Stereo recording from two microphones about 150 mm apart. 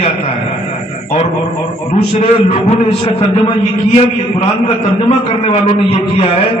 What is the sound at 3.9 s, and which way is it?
Speech, 40° left (ahead or behind).